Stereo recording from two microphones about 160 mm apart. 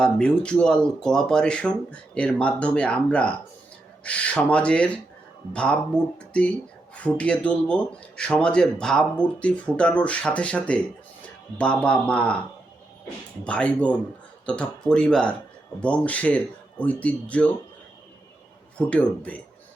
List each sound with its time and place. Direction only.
0.0 s speech: 5° left (ahead or behind)
13.4 s speech: 10° left (ahead or behind)
18.8 s speech: 10° left (ahead or behind)